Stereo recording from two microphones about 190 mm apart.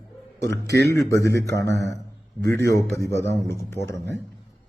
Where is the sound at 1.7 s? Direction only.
65° right (ahead or behind).